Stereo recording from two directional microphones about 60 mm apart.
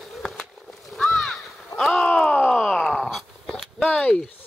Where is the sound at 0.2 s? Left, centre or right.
Centre.